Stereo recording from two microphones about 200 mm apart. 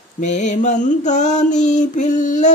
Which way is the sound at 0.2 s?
35° left (ahead or behind).